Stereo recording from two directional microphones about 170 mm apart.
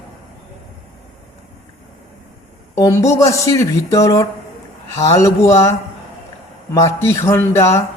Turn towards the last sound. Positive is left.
turn(degrees=15)  # may be behind; listen again after turning